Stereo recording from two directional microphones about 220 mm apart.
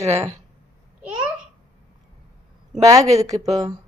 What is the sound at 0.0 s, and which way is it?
Speech, 15° right (ahead or behind).